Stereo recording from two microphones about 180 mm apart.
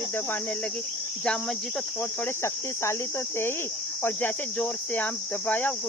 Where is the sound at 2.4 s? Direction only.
15° left (ahead or behind).